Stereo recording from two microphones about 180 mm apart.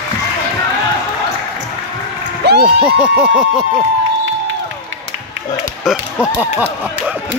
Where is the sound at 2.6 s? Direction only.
5° right (ahead or behind).